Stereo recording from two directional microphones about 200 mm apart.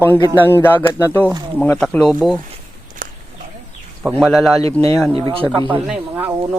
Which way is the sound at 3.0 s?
45° right (ahead or behind).